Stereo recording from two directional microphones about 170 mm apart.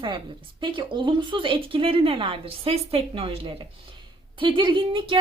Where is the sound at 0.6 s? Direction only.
30° right (ahead or behind).